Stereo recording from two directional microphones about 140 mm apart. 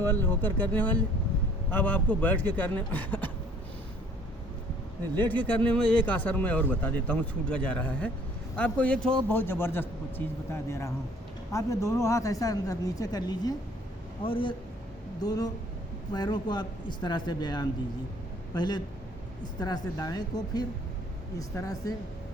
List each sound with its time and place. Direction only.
0.0 s speech: 15° left (ahead or behind)
5.1 s speech: 15° left (ahead or behind)
14.3 s a man's voice: 40° left (ahead or behind)
15.2 s a man's voice: 25° left (ahead or behind)